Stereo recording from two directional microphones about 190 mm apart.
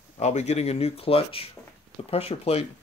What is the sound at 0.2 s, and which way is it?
Speech, 35° left (ahead or behind).